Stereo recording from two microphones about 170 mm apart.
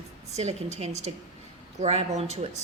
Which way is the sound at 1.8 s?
40° right (ahead or behind).